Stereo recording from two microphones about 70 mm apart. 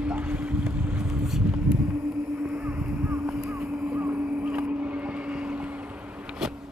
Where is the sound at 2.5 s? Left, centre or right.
Right.